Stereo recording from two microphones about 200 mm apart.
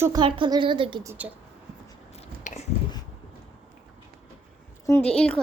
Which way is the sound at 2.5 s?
40° left (ahead or behind).